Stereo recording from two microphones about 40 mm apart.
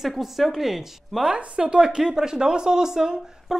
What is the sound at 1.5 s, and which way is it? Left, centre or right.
Speech, right.